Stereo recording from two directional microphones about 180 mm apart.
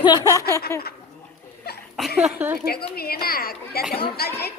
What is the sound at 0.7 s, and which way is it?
Speech, 15° left (ahead or behind).